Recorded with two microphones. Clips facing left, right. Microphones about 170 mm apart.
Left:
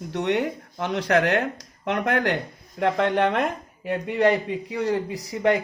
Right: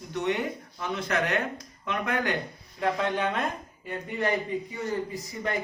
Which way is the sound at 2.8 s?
65° left (ahead or behind).